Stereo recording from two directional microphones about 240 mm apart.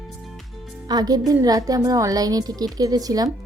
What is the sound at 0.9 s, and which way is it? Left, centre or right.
A woman's voice, centre.